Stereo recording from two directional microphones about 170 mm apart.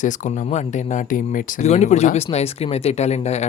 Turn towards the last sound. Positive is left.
turn(degrees=40)  # may be behind; listen again after turning